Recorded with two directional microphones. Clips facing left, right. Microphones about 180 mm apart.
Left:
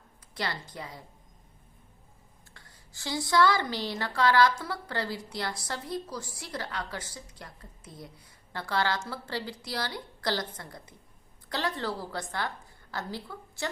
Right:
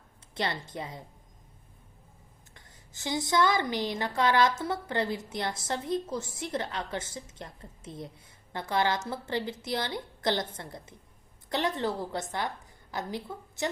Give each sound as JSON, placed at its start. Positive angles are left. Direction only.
{"t": 0.3, "sound": "a woman's voice", "side_deg": -25}
{"t": 2.5, "sound": "a woman's voice", "side_deg": -20}